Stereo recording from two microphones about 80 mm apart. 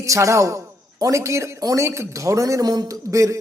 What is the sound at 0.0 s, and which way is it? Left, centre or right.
A woman's voice, right.